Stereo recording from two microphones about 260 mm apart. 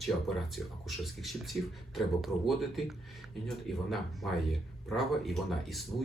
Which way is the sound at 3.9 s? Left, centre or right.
Centre.